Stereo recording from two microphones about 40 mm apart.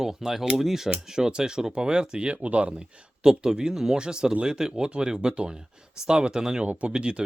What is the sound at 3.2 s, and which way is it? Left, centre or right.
Speech, centre.